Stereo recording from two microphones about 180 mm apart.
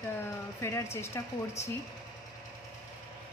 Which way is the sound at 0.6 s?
15° left (ahead or behind).